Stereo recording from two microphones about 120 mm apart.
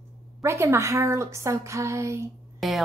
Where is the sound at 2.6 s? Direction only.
Centre (ahead or behind).